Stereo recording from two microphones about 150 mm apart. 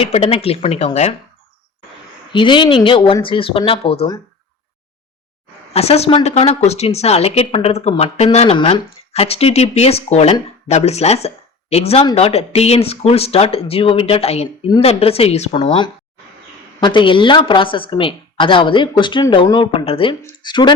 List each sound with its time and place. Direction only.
0.0 s speech: 40° left (ahead or behind)
2.3 s speech: 35° left (ahead or behind)
5.7 s speech: 45° left (ahead or behind)